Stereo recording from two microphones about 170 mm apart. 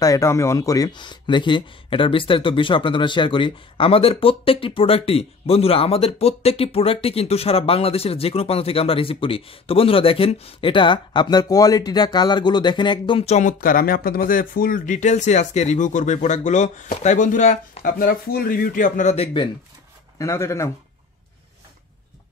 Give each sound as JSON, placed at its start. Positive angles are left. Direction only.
{"t": 0.0, "sound": "speech", "side_deg": 20}
{"t": 17.9, "sound": "speech", "side_deg": 60}
{"t": 20.2, "sound": "speech", "side_deg": 15}